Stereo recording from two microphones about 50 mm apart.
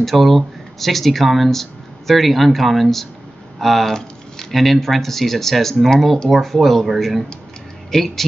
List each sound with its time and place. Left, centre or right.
0.0 s speech: centre